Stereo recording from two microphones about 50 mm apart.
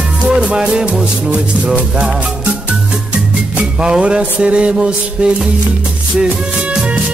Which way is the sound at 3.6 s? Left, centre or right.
Centre.